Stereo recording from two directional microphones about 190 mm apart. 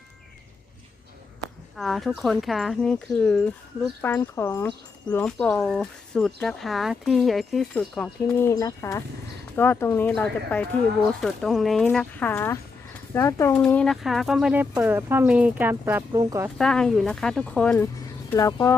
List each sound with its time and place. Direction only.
1.7 s speech: centre (ahead or behind); by 16.5 s 15° right (ahead or behind)
16.6 s speech: 5° left (ahead or behind)
18.3 s speech: 15° left (ahead or behind)